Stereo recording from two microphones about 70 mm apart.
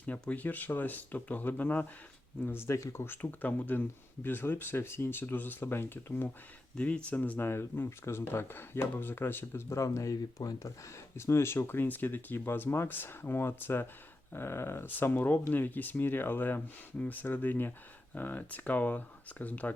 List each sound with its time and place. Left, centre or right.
0.0 s speech: left
2.5 s speech: left
6.7 s speech: centre; by 10.7 s left
11.2 s speech: left